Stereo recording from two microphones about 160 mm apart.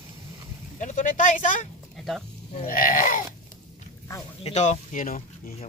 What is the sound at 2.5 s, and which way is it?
Sheep, 60° left (ahead or behind).